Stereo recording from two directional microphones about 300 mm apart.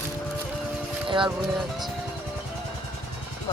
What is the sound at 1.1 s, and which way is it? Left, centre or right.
Speech, centre.